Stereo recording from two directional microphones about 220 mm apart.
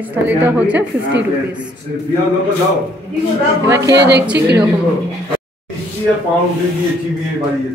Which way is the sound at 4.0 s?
50° right (ahead or behind).